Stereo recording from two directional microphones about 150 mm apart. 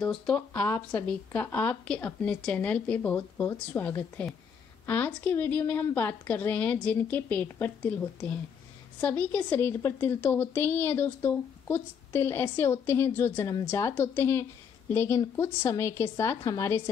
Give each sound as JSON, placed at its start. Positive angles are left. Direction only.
{"t": 0.0, "sound": "speech", "side_deg": 5}
{"t": 0.5, "sound": "a woman's voice", "side_deg": 15}